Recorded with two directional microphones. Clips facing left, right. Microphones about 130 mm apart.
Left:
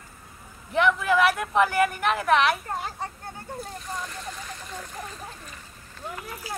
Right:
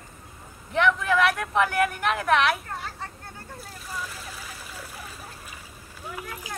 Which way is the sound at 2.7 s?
20° left (ahead or behind).